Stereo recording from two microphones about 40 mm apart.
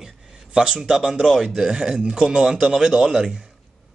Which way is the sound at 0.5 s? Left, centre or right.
Centre.